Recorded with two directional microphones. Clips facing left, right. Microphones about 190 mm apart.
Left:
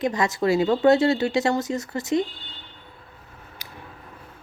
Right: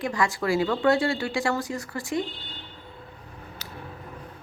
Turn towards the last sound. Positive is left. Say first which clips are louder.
# right 3 dB
turn(degrees=15)  # may be behind; listen again after turning